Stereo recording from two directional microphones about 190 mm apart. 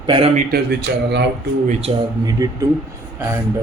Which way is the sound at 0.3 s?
55° right (ahead or behind).